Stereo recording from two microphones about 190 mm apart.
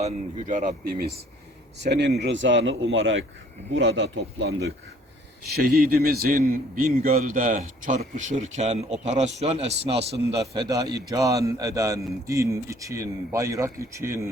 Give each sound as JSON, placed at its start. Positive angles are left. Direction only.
{"t": 0.0, "sound": "a man's voice", "side_deg": -45}
{"t": 1.9, "sound": "speech", "side_deg": -65}
{"t": 3.8, "sound": "a man's voice", "side_deg": -75}
{"t": 10.5, "sound": "a man's voice", "side_deg": -20}